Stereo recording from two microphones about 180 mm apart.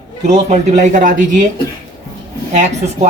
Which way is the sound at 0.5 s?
45° right (ahead or behind).